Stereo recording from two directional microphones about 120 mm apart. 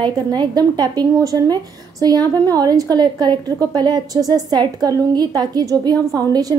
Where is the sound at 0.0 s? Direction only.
35° right (ahead or behind).